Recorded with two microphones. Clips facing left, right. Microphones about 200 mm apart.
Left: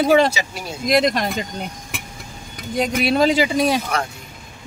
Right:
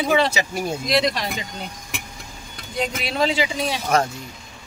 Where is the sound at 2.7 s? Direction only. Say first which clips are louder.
Left 6 dB; 45° left (ahead or behind).